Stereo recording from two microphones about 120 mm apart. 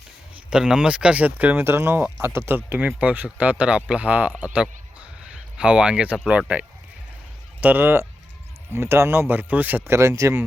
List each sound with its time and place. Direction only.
0.5 s speech: 5° right (ahead or behind)
7.6 s speech: 15° right (ahead or behind)